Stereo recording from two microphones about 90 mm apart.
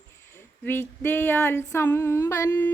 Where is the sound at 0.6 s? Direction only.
25° left (ahead or behind).